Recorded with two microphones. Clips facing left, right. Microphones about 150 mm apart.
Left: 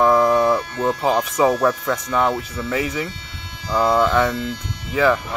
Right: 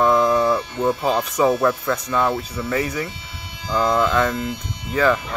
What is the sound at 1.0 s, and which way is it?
Speech, 15° left (ahead or behind).